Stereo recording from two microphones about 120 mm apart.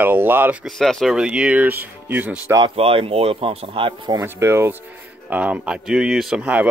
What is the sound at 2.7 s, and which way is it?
Speech, 50° right (ahead or behind).